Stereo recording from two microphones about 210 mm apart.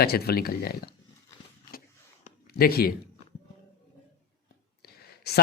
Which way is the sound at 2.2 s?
45° left (ahead or behind).